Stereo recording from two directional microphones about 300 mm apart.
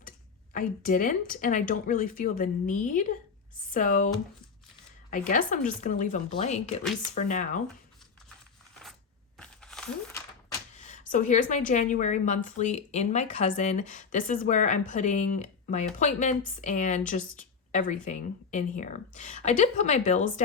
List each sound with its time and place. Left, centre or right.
0.5 s a woman's voice: left
5.1 s a woman's voice: left
9.4 s crumpling: centre
10.8 s a woman's voice: left